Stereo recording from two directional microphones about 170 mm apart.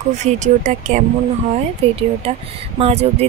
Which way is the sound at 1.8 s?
35° right (ahead or behind).